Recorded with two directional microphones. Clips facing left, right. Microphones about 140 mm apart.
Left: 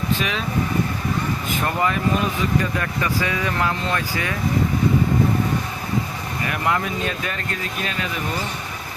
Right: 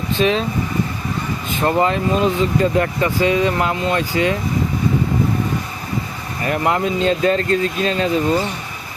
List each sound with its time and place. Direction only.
0.2 s speech: 30° right (ahead or behind)
1.6 s speech: 25° right (ahead or behind)
6.5 s speech: 25° right (ahead or behind)